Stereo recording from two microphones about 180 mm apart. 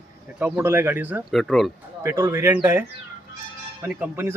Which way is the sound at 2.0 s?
15° right (ahead or behind).